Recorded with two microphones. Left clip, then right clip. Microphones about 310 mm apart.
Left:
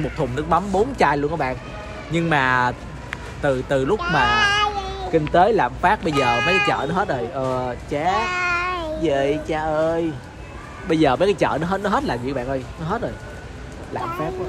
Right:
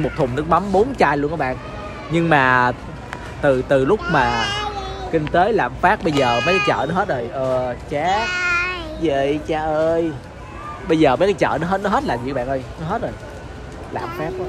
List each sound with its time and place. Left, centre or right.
0.2 s speech: centre
4.4 s a sound: left
5.3 s speech: centre
8.2 s baby cry: centre
9.0 s speech: centre